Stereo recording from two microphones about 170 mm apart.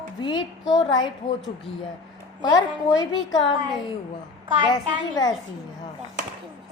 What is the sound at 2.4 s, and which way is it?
A child's voice, 25° left (ahead or behind).